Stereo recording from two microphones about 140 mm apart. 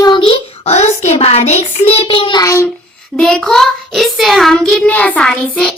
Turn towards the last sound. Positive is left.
turn(degrees=5)  # may be behind; listen again after turning